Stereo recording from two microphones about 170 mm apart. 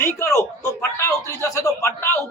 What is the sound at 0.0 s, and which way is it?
A man's voice, 15° left (ahead or behind).